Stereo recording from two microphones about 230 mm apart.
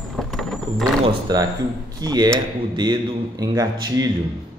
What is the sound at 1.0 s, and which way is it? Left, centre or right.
A man's voice, centre.